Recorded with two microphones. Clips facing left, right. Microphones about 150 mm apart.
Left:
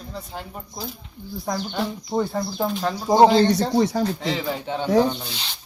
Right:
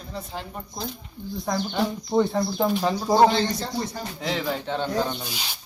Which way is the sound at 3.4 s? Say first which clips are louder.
Left 8 dB; 70° left (ahead or behind).